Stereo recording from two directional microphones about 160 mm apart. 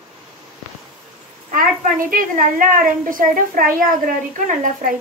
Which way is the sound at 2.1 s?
60° right (ahead or behind).